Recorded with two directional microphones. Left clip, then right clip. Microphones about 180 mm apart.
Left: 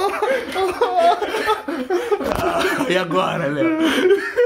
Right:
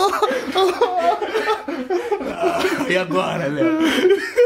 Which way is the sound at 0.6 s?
65° right (ahead or behind).